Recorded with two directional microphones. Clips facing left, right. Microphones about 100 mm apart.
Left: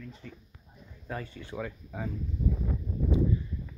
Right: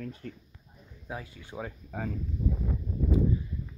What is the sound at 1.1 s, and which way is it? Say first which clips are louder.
Speech: left 2 dB; 10° right (ahead or behind).